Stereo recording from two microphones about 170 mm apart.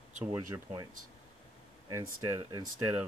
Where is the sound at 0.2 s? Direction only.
15° right (ahead or behind).